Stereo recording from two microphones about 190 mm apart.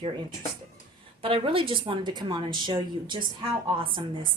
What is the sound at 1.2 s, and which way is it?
Speech, 30° right (ahead or behind).